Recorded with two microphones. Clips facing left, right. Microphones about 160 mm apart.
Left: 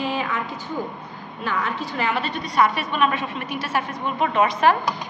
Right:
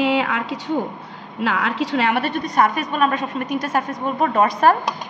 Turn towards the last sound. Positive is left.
turn(degrees=-45)  # may be behind; listen again after turning